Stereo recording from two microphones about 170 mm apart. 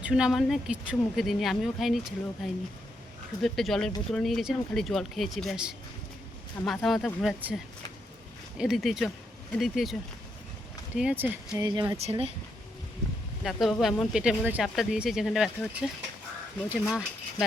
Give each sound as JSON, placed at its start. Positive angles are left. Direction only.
{"t": 0.0, "sound": "speech", "side_deg": -5}
{"t": 11.6, "sound": "speech", "side_deg": -25}
{"t": 11.9, "sound": "speech", "side_deg": -35}
{"t": 13.4, "sound": "speech", "side_deg": 0}